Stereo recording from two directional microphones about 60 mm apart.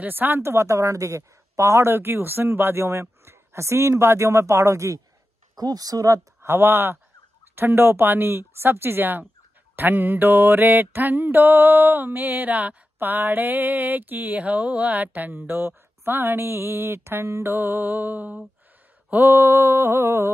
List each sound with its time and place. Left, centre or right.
0.0 s a woman's voice: right
5.6 s speech: right
6.4 s mantra: right
19.1 s a woman's voice: right